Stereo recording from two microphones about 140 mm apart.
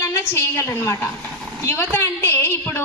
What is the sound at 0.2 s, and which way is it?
A woman's voice, 20° left (ahead or behind).